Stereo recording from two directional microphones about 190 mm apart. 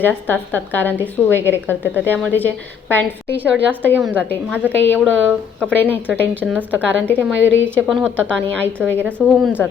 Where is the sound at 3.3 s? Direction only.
10° right (ahead or behind).